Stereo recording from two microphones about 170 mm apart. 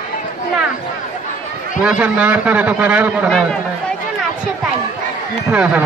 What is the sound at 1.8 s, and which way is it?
A man's voice, 5° right (ahead or behind).